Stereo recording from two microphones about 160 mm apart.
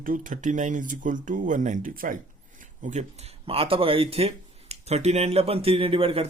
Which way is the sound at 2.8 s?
45° right (ahead or behind).